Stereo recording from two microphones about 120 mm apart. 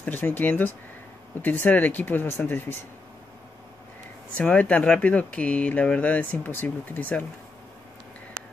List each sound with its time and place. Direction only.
0.0 s speech: 15° left (ahead or behind)
4.4 s speech: 10° left (ahead or behind)